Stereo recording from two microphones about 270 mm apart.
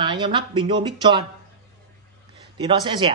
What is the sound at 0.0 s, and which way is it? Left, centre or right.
A woman's voice, centre.